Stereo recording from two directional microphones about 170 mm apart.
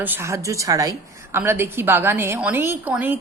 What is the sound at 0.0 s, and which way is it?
A woman's voice, 15° right (ahead or behind).